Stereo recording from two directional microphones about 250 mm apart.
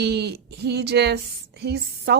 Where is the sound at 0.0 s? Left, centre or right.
Right.